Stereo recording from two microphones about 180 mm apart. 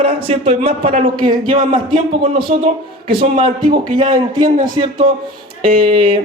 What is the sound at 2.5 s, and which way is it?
Speech, 40° right (ahead or behind).